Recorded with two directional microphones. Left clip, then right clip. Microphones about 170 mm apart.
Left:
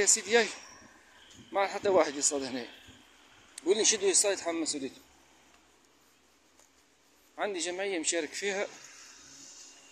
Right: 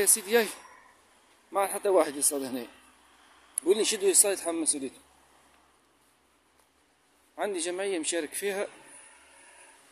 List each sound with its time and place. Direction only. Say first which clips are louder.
0.3 s speech: right 1 dB; 50° right (ahead or behind)
7.3 s speech: right 2 dB; 55° right (ahead or behind)